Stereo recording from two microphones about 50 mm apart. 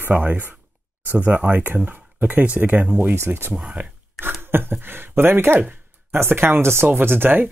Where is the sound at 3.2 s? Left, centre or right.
Right.